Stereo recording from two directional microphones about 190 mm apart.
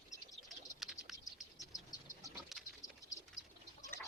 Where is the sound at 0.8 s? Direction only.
Centre (ahead or behind).